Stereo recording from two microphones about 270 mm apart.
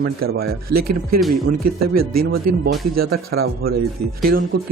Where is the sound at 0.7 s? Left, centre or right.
Right.